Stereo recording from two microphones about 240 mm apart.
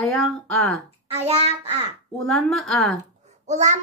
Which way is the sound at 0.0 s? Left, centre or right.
Centre.